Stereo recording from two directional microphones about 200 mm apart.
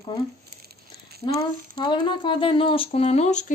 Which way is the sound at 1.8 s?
20° left (ahead or behind).